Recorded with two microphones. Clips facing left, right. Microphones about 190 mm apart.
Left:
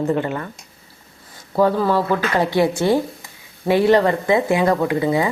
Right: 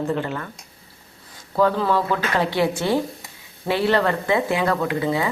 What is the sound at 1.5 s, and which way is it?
Speech, 10° left (ahead or behind).